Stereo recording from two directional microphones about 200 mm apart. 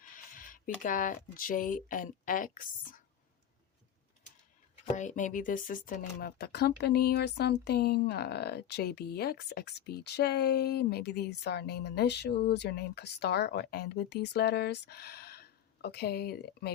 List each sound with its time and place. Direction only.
0.3 s speech: 45° left (ahead or behind)
4.9 s speech: 40° left (ahead or behind)